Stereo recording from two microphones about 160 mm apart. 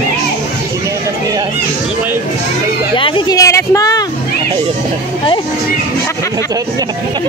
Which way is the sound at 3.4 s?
20° left (ahead or behind).